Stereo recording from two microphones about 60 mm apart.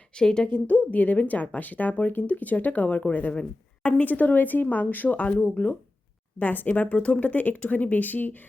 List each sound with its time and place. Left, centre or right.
0.2 s a woman's voice: centre
0.5 s a woman's voice: left